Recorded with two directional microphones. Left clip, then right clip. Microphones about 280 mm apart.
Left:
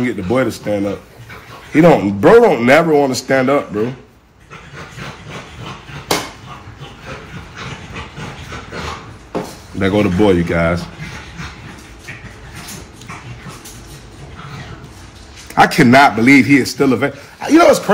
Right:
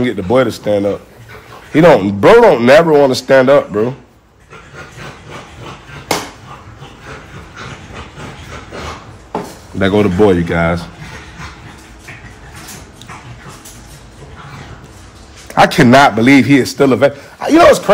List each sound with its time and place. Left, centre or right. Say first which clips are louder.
0.0 s a man's voice: right 4 dB; right
9.8 s a man's voice: right 3 dB; right
15.5 s a man's voice: right 2 dB; right